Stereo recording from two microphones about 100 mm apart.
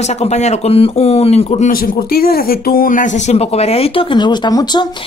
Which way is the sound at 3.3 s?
90° left.